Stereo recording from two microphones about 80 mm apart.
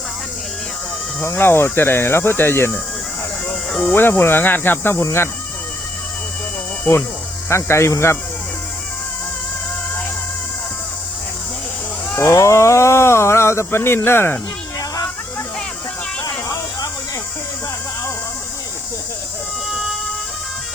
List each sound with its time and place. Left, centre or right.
1.2 s speech: left
7.5 s speech: left
12.1 s speech: left
19.7 s music: centre